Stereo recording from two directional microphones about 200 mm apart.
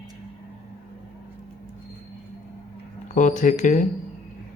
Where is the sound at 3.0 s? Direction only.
40° left (ahead or behind).